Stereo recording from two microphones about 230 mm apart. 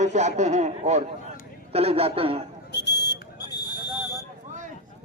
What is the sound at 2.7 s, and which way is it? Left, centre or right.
Buzzer, left.